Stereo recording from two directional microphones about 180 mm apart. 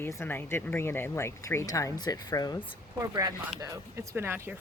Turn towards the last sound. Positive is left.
turn(degrees=-10)  # may be behind; listen again after turning